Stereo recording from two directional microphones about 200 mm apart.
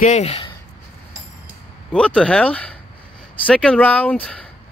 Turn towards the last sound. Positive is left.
turn(degrees=5)  # may be behind; listen again after turning